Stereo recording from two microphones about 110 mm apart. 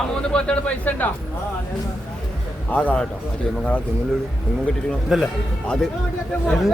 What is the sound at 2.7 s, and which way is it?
Speech, 15° left (ahead or behind).